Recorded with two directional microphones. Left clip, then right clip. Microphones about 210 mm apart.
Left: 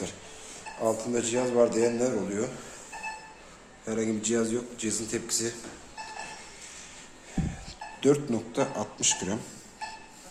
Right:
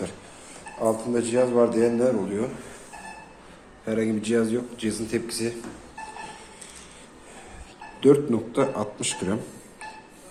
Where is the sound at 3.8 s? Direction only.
5° right (ahead or behind).